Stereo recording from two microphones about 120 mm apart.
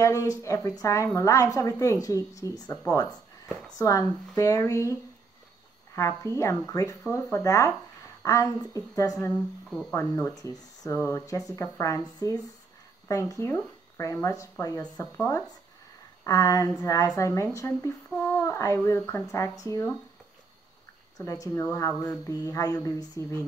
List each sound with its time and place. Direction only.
0.0 s speech: 25° left (ahead or behind)
2.9 s a sound: 30° left (ahead or behind)
3.7 s speech: 30° left (ahead or behind)
5.9 s speech: 25° left (ahead or behind)
9.7 s speech: centre (ahead or behind)
9.9 s speech: 15° left (ahead or behind)
10.3 s speech: 30° left (ahead or behind)
14.8 s speech: 15° left (ahead or behind)
16.3 s speech: 30° left (ahead or behind)
21.2 s speech: 25° left (ahead or behind)
22.2 s a sound: 30° left (ahead or behind)
23.2 s speech: 25° left (ahead or behind)